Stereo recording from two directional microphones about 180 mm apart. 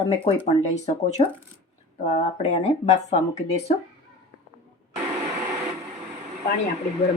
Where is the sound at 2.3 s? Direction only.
35° left (ahead or behind).